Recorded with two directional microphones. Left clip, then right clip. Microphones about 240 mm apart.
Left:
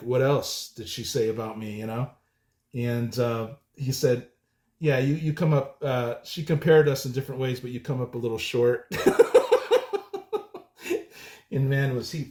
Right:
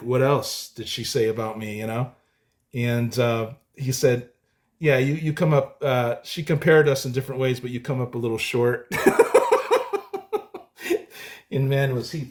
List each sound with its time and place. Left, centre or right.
0.1 s speech: right